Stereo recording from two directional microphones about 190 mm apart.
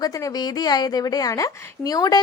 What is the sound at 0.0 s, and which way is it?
A woman's voice, 20° left (ahead or behind).